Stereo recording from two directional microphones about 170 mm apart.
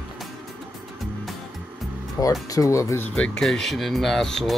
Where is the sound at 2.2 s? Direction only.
20° left (ahead or behind).